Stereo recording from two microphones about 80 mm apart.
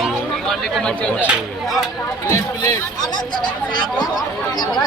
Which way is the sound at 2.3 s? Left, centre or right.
Left.